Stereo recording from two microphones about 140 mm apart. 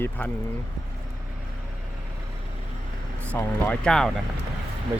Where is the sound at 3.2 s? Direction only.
10° left (ahead or behind).